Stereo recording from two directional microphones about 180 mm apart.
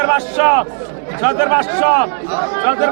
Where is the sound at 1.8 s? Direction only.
25° left (ahead or behind).